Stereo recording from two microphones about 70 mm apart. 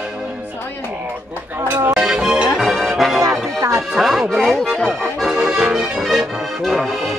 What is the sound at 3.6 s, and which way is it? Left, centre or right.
Music, right.